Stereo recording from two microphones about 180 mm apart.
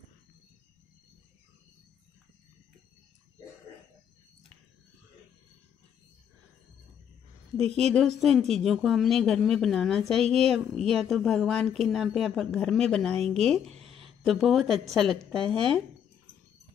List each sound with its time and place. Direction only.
7.9 s a woman's voice: centre (ahead or behind)
13.7 s a sound: 35° right (ahead or behind)
13.9 s a woman's voice: centre (ahead or behind)